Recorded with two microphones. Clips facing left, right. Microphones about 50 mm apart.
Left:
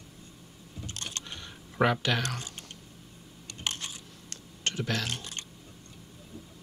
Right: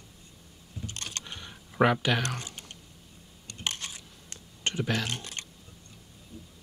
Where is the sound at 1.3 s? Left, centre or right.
Centre.